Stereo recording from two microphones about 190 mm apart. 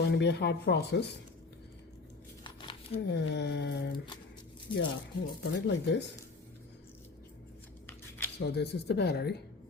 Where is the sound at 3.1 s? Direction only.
65° left (ahead or behind).